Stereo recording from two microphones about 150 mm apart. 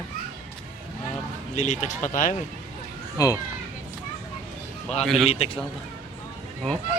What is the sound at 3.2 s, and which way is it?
Speech, 20° left (ahead or behind).